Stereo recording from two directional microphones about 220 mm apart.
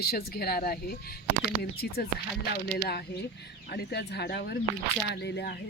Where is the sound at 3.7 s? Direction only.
45° left (ahead or behind).